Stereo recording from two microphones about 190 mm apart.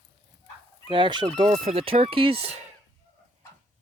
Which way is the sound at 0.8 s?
25° right (ahead or behind).